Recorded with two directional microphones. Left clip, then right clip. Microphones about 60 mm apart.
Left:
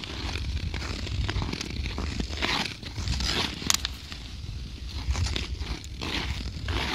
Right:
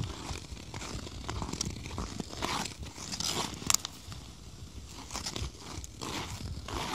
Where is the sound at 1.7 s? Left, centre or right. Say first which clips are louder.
Left 7 dB; right.